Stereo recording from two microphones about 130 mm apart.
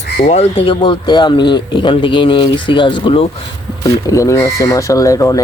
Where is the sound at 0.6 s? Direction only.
40° left (ahead or behind).